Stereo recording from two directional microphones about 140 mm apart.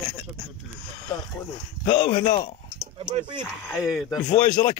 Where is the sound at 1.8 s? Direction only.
45° left (ahead or behind).